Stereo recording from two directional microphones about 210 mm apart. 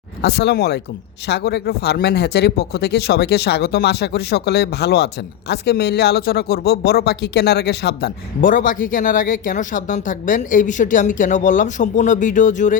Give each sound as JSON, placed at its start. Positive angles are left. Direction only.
{"t": 0.2, "sound": "speech", "side_deg": 50}